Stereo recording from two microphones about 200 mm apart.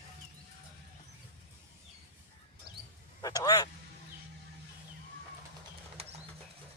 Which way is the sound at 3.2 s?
20° left (ahead or behind).